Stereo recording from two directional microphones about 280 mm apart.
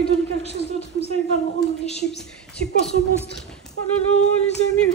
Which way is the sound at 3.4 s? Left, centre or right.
Centre.